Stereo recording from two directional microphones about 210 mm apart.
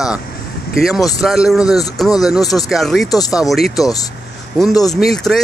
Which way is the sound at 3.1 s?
15° left (ahead or behind).